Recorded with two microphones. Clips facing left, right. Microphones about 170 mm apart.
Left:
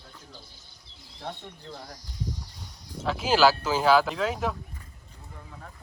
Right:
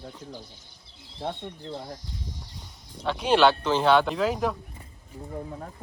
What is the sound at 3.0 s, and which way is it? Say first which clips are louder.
Speech: right 1 dB; centre (ahead or behind).